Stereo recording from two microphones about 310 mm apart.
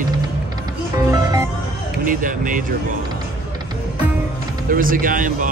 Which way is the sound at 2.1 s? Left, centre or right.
Right.